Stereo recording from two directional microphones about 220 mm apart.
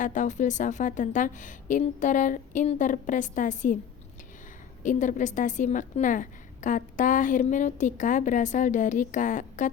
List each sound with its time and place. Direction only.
0.0 s a woman's voice: 35° left (ahead or behind)
4.8 s a woman's voice: 35° left (ahead or behind)